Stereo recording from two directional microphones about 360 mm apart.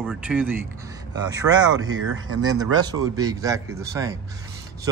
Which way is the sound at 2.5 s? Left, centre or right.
Centre.